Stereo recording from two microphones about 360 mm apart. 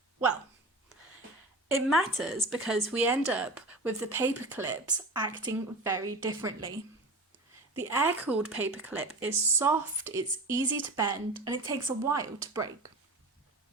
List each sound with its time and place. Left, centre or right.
1.6 s speech: centre
7.8 s speech: centre